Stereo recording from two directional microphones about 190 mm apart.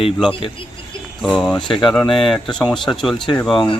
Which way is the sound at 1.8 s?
5° left (ahead or behind).